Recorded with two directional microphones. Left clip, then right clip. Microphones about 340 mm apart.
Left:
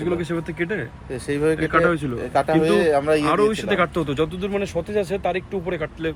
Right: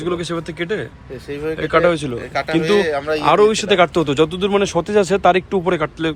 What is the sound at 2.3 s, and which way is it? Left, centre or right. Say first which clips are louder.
Speech: right 1 dB; centre.